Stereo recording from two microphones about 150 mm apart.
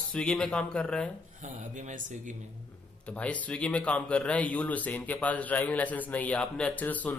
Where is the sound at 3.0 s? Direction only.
10° left (ahead or behind).